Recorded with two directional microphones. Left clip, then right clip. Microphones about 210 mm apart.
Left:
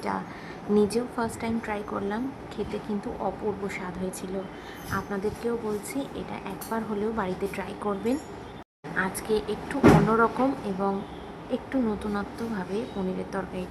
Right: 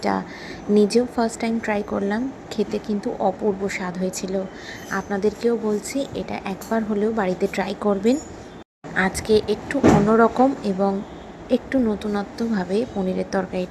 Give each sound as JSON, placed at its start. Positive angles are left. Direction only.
{"t": 0.8, "sound": "a woman's voice", "side_deg": -20}